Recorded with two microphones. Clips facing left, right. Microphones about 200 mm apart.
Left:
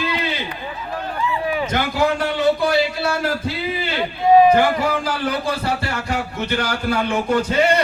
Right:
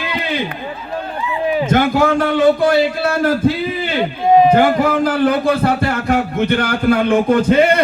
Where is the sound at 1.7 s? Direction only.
50° right (ahead or behind).